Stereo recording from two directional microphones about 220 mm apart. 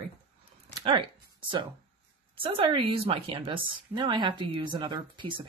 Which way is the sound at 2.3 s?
25° right (ahead or behind).